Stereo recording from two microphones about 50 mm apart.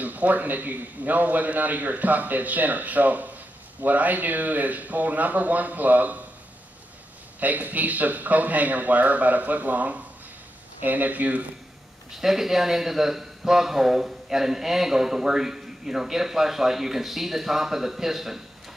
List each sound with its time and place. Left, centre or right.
0.0 s a man's voice: right
7.3 s a man's voice: right
12.1 s a man's voice: centre